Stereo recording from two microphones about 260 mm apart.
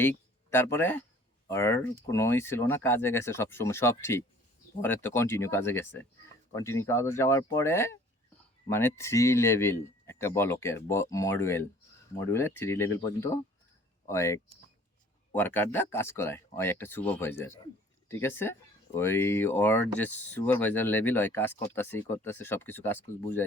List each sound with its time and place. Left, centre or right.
0.0 s speech: centre